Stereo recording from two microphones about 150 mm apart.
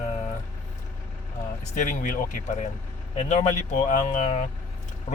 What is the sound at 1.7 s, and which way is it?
Speech, 60° left (ahead or behind).